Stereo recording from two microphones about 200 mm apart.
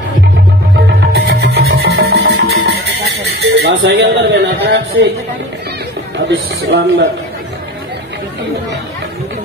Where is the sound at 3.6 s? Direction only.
60° right (ahead or behind).